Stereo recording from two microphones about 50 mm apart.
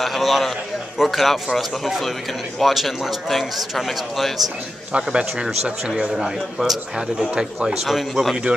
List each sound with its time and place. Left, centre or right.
0.0 s speech: centre
4.9 s a man's voice: right; by 8.4 s centre